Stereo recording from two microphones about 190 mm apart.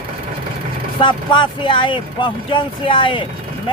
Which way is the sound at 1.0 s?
25° left (ahead or behind).